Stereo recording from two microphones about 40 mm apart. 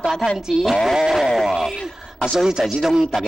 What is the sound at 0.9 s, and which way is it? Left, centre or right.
Speech, centre.